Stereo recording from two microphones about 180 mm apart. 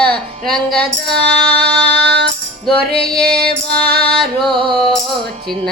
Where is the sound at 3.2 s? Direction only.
60° right (ahead or behind).